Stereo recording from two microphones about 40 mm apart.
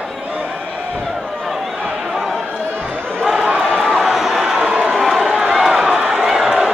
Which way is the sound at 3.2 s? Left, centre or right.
Centre.